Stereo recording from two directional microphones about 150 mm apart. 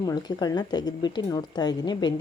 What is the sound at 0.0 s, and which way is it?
A woman's voice, 25° left (ahead or behind).